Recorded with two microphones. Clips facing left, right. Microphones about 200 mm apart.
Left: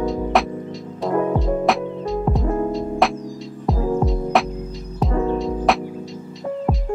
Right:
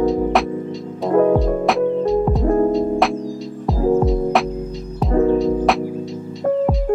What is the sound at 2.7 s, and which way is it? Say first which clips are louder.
Music: right 4 dB; centre (ahead or behind).